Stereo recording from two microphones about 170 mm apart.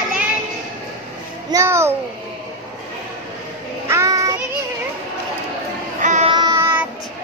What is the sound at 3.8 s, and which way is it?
Child singing, 15° right (ahead or behind).